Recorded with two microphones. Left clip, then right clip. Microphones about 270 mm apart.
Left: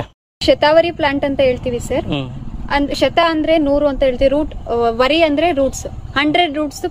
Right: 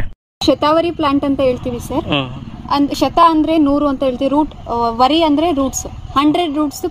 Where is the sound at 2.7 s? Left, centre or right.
Right.